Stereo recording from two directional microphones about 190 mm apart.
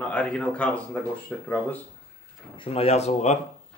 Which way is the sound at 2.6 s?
30° left (ahead or behind).